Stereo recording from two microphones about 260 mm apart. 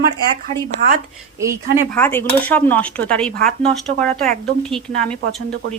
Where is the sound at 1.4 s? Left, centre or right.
Centre.